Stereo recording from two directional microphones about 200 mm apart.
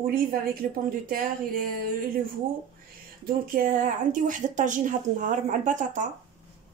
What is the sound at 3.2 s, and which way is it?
Speech, 45° right (ahead or behind).